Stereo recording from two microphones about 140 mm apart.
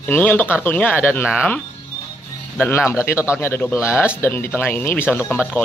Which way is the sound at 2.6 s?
15° left (ahead or behind).